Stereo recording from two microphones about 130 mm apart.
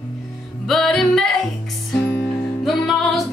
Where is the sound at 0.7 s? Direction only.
Centre (ahead or behind).